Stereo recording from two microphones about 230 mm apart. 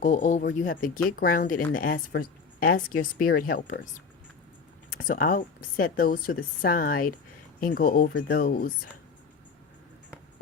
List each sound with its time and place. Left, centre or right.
0.0 s speech: left
4.9 s speech: left